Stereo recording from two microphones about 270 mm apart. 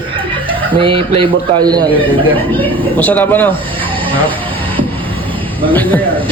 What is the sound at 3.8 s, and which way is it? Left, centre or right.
Snake, centre.